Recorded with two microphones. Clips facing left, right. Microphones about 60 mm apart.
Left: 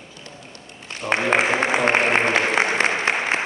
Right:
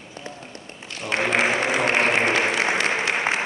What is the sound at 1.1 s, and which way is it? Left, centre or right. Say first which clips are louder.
Applause: left 2 dB; left.